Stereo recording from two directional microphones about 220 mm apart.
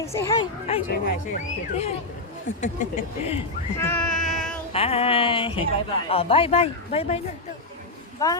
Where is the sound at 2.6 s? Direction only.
30° left (ahead or behind).